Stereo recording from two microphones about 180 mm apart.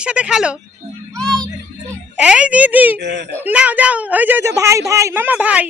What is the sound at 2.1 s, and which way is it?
Speech, 5° right (ahead or behind).